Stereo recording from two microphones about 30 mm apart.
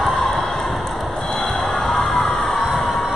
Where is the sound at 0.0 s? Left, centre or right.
Centre.